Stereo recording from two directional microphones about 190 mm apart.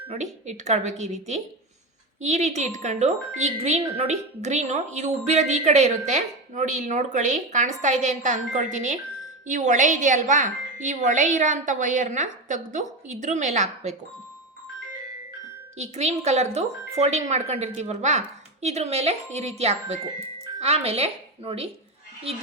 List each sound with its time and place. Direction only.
0.1 s speech: 40° right (ahead or behind)
2.2 s speech: 35° right (ahead or behind)
15.8 s a woman's voice: 35° right (ahead or behind)